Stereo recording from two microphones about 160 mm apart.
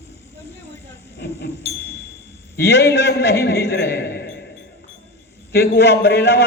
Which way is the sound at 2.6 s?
90° left.